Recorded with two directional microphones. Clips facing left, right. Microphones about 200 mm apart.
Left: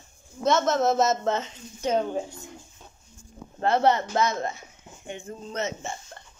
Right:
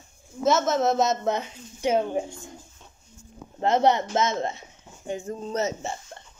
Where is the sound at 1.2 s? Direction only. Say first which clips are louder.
Even; 15° right (ahead or behind).